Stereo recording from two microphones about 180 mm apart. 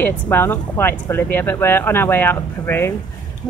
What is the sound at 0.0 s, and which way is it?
Speech, 10° left (ahead or behind).